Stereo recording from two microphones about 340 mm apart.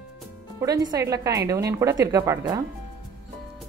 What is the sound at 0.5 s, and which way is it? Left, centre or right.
Speech, centre.